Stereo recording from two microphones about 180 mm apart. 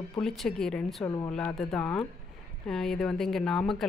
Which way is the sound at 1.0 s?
20° left (ahead or behind).